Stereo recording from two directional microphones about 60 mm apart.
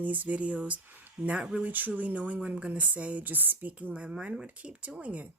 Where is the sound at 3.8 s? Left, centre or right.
Right.